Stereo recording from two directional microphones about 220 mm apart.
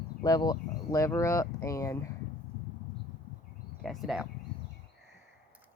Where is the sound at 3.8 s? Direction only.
Centre (ahead or behind).